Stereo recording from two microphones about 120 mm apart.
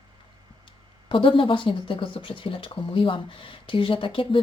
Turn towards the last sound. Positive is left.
turn(degrees=45)  # may be behind; listen again after turning